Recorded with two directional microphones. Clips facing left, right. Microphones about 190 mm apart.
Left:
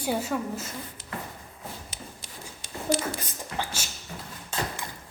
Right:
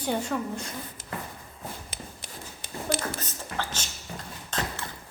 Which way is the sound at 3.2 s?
15° left (ahead or behind).